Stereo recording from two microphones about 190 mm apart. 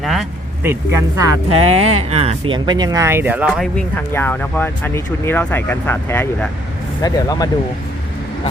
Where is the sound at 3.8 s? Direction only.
10° left (ahead or behind).